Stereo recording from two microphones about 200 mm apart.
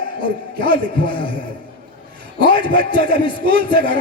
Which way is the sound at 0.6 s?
25° left (ahead or behind).